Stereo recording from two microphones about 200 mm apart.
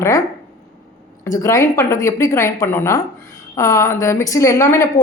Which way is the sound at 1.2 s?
15° left (ahead or behind).